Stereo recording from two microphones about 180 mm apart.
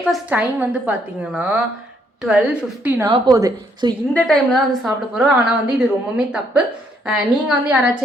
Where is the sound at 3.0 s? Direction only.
20° right (ahead or behind).